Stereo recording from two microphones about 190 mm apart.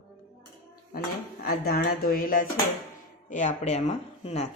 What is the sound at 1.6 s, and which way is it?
Speech, 55° left (ahead or behind).